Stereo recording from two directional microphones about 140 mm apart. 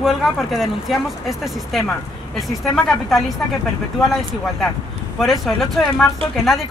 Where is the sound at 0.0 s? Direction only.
Centre (ahead or behind).